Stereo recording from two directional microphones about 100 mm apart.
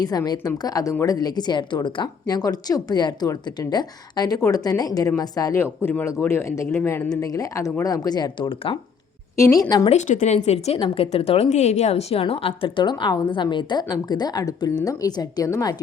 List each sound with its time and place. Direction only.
0.0 s a woman's voice: 40° left (ahead or behind)
5.5 s speech: 25° left (ahead or behind)
7.1 s speech: 35° left (ahead or behind)
8.4 s speech: 60° left (ahead or behind)
9.3 s speech: 30° left (ahead or behind)
9.9 s a woman's voice: 90° left; by 15.5 s 40° left (ahead or behind)